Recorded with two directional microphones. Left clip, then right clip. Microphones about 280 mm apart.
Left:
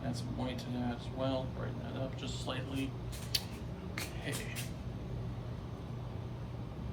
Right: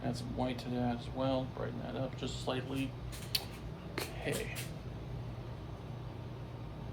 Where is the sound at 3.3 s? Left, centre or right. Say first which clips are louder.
Even; centre.